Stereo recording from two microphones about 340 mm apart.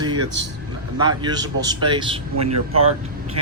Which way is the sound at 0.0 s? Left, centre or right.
Centre.